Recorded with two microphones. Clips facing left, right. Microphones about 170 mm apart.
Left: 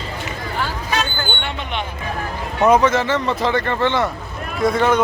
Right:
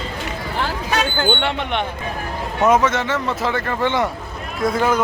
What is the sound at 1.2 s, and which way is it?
Speech, 75° right (ahead or behind).